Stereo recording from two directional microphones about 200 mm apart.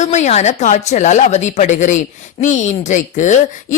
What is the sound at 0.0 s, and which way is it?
Speech, 35° left (ahead or behind).